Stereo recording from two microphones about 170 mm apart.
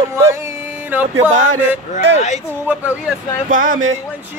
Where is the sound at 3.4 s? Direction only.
50° right (ahead or behind).